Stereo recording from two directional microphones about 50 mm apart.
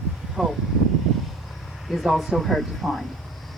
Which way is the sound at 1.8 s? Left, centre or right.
Centre.